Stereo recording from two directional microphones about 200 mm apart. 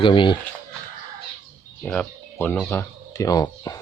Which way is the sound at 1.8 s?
5° left (ahead or behind).